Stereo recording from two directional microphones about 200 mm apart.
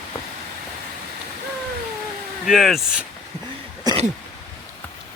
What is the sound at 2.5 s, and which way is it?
Speech, centre (ahead or behind).